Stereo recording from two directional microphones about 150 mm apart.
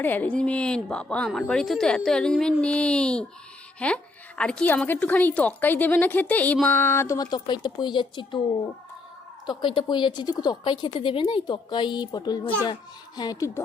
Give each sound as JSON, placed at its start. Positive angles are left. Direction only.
{"t": 0.0, "sound": "a woman's voice", "side_deg": 10}
{"t": 9.5, "sound": "a woman's voice", "side_deg": 30}